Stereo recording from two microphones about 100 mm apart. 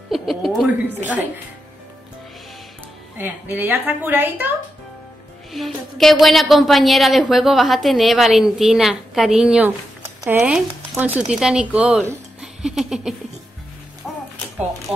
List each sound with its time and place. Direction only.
0.1 s music: centre (ahead or behind)
0.7 s speech: 20° right (ahead or behind)
3.2 s a woman's voice: 20° right (ahead or behind)
5.7 s a woman's voice: centre (ahead or behind)
12.4 s giggle: 5° right (ahead or behind)
14.0 s music: centre (ahead or behind)